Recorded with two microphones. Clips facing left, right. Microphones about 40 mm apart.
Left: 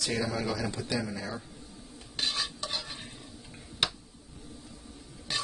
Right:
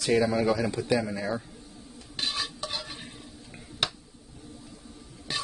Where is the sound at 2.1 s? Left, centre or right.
Centre.